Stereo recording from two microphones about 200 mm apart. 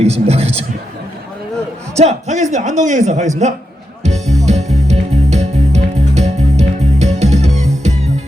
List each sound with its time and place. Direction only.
0.0 s speech: 35° right (ahead or behind)
2.0 s speech: 35° right (ahead or behind)
4.0 s music: 35° right (ahead or behind)